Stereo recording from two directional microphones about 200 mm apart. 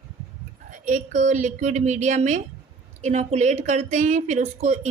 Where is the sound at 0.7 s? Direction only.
40° right (ahead or behind).